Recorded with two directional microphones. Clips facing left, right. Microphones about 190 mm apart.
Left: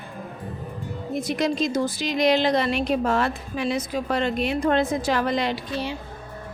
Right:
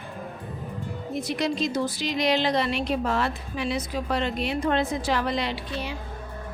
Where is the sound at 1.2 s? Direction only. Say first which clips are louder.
Left 3 dB; 45° left (ahead or behind).